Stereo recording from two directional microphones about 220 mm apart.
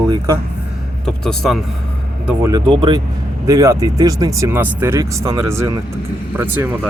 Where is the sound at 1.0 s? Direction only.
5° left (ahead or behind).